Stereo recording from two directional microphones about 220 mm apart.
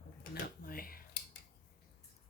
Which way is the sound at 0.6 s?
40° left (ahead or behind).